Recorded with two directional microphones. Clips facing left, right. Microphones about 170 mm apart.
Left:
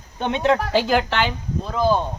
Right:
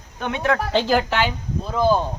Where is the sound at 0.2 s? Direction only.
25° left (ahead or behind).